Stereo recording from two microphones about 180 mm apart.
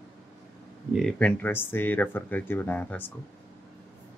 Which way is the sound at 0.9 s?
5° left (ahead or behind).